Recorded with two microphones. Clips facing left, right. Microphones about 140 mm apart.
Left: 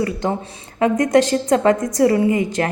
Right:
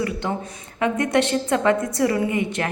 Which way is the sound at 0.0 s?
35° left (ahead or behind).